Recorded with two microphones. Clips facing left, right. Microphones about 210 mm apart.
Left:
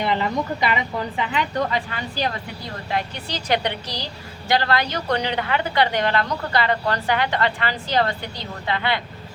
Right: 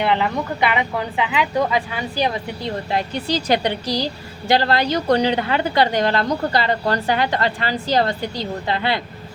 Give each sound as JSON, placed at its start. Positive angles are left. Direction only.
{"t": 0.0, "sound": "a woman's voice", "side_deg": -65}
{"t": 1.5, "sound": "speech", "side_deg": -10}
{"t": 2.6, "sound": "a woman's voice", "side_deg": -35}